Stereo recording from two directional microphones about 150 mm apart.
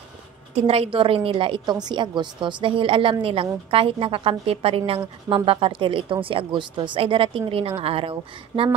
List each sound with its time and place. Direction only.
0.7 s a woman's voice: 40° right (ahead or behind)